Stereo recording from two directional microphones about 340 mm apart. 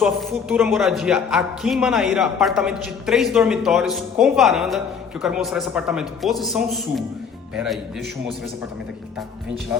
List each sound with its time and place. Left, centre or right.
0.0 s a woman's voice: centre